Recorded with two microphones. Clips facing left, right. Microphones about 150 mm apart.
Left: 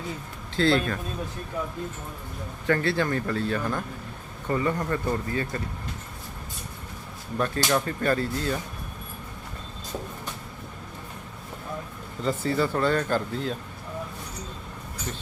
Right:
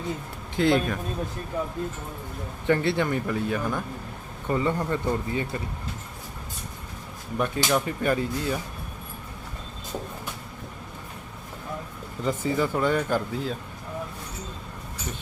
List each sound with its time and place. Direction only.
0.5 s speech: 15° right (ahead or behind)
2.6 s speech: 20° right (ahead or behind)
7.3 s speech: 15° right (ahead or behind)
12.2 s speech: 15° right (ahead or behind)